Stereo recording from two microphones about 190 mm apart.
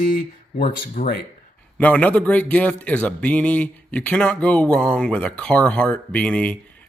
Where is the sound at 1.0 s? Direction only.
40° left (ahead or behind).